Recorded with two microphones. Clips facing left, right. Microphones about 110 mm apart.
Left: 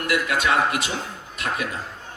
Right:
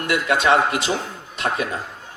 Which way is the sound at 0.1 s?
30° right (ahead or behind).